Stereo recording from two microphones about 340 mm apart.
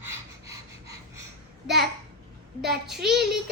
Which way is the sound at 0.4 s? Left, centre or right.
Right.